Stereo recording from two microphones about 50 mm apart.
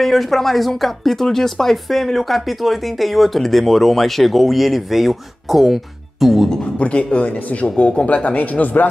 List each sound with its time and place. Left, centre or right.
0.0 s speech: centre
6.5 s speech: left